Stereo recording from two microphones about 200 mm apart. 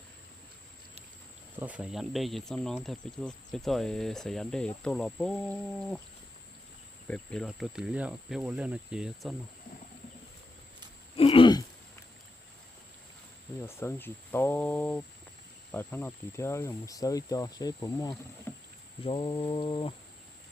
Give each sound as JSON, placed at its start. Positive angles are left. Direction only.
{"t": 1.5, "sound": "speech", "side_deg": -5}
{"t": 7.1, "sound": "speech", "side_deg": 5}
{"t": 11.2, "sound": "throat clearing", "side_deg": 25}
{"t": 13.7, "sound": "speech", "side_deg": 10}
{"t": 18.5, "sound": "rowboat", "side_deg": 10}
{"t": 19.0, "sound": "mantra", "side_deg": 25}